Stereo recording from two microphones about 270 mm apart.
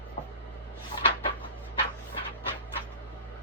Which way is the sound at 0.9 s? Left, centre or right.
Left.